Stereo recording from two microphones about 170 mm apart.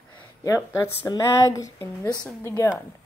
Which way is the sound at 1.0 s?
20° left (ahead or behind).